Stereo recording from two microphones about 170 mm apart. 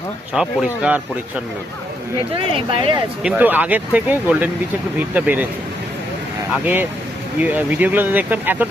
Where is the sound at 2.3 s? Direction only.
30° right (ahead or behind).